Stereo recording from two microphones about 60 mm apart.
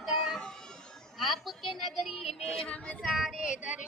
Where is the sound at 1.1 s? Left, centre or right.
Centre.